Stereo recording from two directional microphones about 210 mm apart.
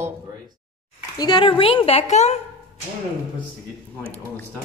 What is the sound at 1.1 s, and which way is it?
A woman's voice, 20° left (ahead or behind).